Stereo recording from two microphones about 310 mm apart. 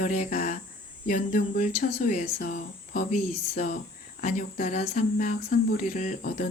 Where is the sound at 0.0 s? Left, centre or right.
Left.